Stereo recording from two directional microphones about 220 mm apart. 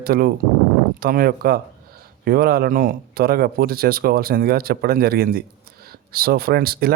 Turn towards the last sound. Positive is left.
turn(degrees=-45)  # may be behind; listen again after turning